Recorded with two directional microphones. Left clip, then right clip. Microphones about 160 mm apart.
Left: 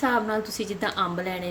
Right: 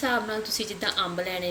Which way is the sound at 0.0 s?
45° left (ahead or behind).